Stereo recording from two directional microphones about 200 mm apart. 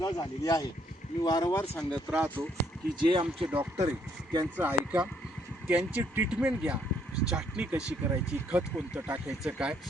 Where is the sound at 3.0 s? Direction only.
25° right (ahead or behind).